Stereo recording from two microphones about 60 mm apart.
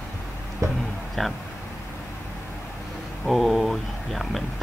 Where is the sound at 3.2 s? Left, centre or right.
Centre.